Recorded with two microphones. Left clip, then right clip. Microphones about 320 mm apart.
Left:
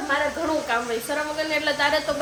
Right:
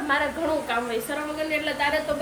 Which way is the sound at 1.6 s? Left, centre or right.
Centre.